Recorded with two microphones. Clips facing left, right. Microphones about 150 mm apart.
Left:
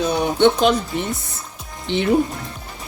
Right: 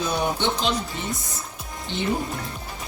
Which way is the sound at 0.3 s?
60° left (ahead or behind).